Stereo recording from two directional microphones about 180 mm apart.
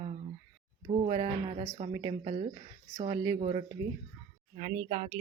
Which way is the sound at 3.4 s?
35° right (ahead or behind).